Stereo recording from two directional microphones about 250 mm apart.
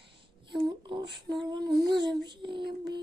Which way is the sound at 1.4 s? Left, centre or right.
Centre.